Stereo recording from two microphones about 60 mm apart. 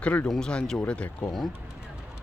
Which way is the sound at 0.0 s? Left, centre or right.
Left.